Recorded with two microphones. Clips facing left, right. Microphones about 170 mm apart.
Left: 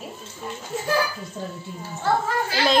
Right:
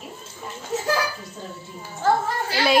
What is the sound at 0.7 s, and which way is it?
Speech, 90° right.